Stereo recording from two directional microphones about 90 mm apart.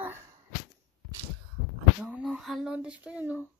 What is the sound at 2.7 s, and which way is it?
Speech, 15° right (ahead or behind).